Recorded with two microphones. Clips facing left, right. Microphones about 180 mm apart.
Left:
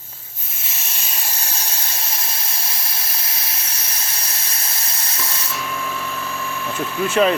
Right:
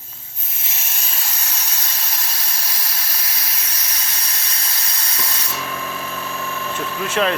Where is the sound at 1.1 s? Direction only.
25° left (ahead or behind).